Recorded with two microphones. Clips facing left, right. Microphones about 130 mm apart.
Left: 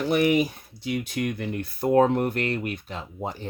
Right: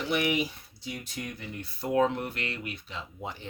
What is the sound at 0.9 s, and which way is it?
Speech, 70° left (ahead or behind).